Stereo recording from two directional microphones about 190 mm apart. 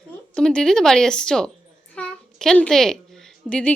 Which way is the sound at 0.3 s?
5° left (ahead or behind).